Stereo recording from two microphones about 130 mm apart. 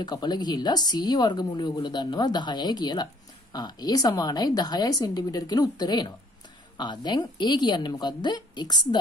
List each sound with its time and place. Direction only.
0.0 s speech: 30° left (ahead or behind)